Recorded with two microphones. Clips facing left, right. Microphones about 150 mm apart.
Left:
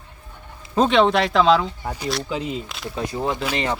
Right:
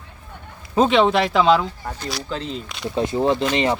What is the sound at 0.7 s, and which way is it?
Speech, centre (ahead or behind).